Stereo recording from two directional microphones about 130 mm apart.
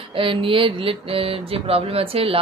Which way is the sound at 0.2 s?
40° right (ahead or behind).